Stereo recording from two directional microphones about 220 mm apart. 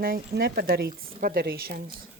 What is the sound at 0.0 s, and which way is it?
A woman's voice, 45° right (ahead or behind).